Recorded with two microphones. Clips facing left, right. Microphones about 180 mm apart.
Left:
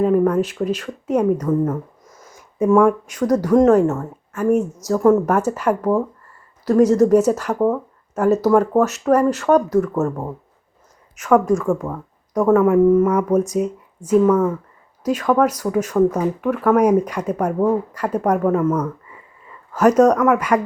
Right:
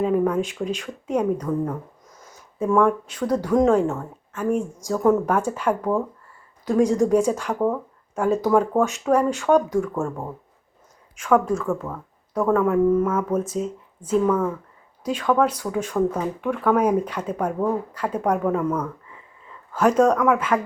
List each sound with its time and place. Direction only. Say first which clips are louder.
0.0 s speech: left 5 dB; centre (ahead or behind)
7.0 s speech: left 5 dB; 5° left (ahead or behind)